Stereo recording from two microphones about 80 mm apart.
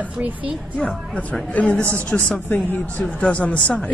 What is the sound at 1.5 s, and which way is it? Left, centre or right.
A woman's voice, centre.